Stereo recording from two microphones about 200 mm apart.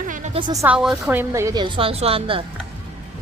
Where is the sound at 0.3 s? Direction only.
20° right (ahead or behind).